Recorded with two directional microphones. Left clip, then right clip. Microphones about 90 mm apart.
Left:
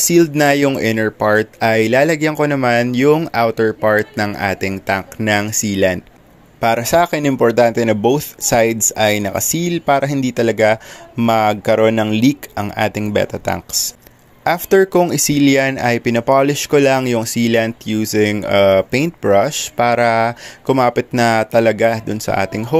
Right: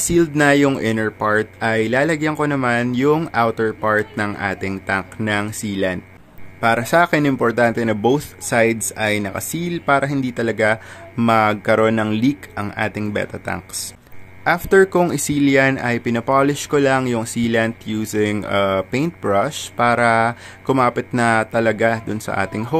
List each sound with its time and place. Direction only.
0.4 s speech: 30° left (ahead or behind)
8.8 s speech: 35° left (ahead or behind)
22.0 s speech: 15° left (ahead or behind)
22.3 s speech: 30° left (ahead or behind)